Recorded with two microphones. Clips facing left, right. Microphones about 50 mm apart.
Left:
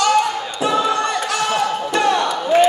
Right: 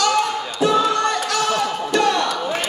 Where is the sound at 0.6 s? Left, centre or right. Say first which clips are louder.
Right 1 dB; centre.